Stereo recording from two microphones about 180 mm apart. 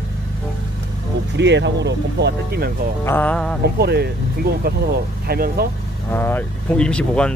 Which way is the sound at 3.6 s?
65° right (ahead or behind).